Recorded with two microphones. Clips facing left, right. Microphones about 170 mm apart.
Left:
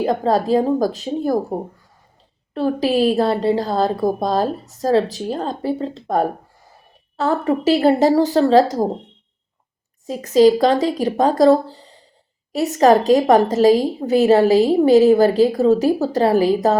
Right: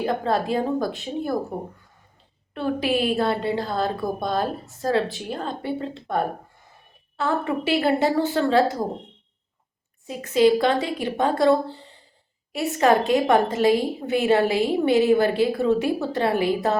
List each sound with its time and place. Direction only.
0.0 s a woman's voice: 40° left (ahead or behind)
2.6 s a woman's voice: 35° left (ahead or behind)
10.1 s a woman's voice: 35° left (ahead or behind)